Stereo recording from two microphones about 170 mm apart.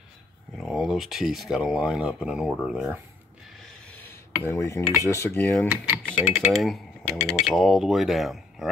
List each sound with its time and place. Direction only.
0.6 s speech: centre (ahead or behind)
3.9 s a sound: 15° left (ahead or behind)
5.0 s speech: 15° left (ahead or behind)
6.1 s speech: centre (ahead or behind)